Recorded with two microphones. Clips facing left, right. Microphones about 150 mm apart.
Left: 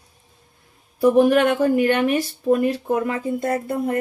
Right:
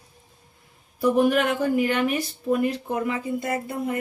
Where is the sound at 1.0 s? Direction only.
40° left (ahead or behind).